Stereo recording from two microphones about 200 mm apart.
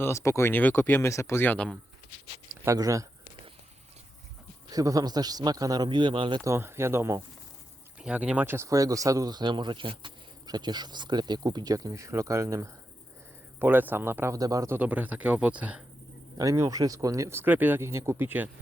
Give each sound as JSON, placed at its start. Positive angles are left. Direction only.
{"t": 0.0, "sound": "speech", "side_deg": 15}
{"t": 2.6, "sound": "speech", "side_deg": -15}
{"t": 4.7, "sound": "speech", "side_deg": -15}
{"t": 16.4, "sound": "speech", "side_deg": -15}